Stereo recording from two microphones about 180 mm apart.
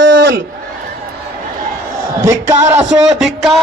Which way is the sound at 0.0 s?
85° right.